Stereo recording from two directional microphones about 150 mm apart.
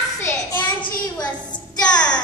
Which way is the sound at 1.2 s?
5° left (ahead or behind).